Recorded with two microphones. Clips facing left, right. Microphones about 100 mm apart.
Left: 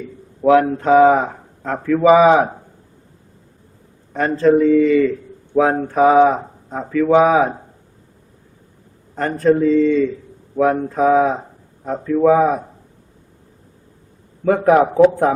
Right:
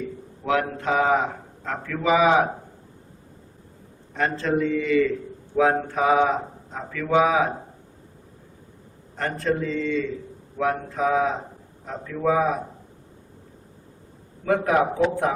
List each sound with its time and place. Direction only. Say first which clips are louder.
0.4 s speech: left 10 dB; 35° left (ahead or behind)
4.1 s speech: left 9 dB; 40° left (ahead or behind)
9.1 s a man's voice: left 9 dB; 40° left (ahead or behind)
14.4 s speech: left 7 dB; 35° left (ahead or behind)